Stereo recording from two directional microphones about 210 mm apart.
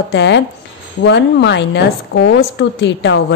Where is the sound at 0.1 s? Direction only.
55° left (ahead or behind).